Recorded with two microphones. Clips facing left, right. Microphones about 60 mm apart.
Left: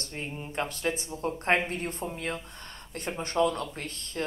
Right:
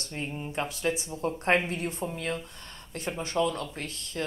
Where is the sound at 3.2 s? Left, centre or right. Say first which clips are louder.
Left 2 dB; left.